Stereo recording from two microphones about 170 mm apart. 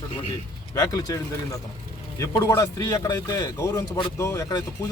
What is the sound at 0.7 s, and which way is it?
A man's voice, 20° left (ahead or behind).